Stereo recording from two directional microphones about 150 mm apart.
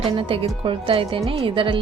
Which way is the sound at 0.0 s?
35° right (ahead or behind).